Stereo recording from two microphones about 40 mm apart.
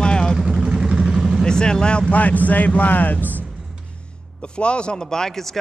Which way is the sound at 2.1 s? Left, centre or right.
Left.